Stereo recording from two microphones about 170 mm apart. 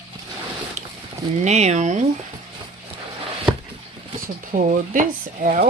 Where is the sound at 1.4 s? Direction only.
40° right (ahead or behind).